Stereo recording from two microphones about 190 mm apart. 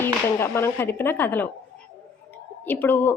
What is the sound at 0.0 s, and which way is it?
A woman's voice, 10° left (ahead or behind).